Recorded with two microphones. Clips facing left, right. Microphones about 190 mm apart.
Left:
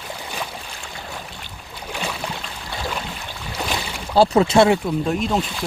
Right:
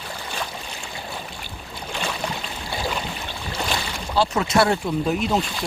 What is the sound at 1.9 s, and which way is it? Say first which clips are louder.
Boat: left 1 dB; 10° left (ahead or behind).